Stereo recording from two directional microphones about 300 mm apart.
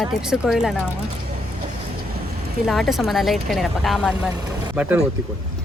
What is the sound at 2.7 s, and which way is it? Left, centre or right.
A woman's voice, centre.